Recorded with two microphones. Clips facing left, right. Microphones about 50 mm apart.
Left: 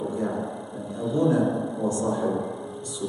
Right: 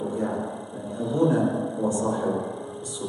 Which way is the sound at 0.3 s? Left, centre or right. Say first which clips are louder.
Even; centre.